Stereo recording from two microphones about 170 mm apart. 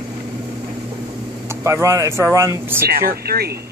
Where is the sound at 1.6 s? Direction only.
20° right (ahead or behind).